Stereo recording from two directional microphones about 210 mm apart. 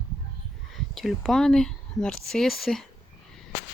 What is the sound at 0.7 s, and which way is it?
Speech, centre (ahead or behind).